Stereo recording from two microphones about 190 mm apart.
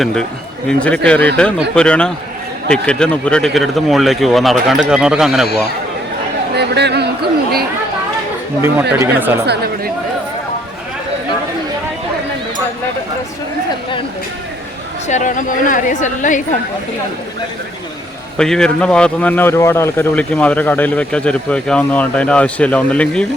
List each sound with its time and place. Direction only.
0.0 s speech: 5° left (ahead or behind)
6.6 s speech: 60° right (ahead or behind)
8.6 s speech: 10° right (ahead or behind)
15.0 s a woman's voice: 40° left (ahead or behind)
18.3 s speech: 5° left (ahead or behind)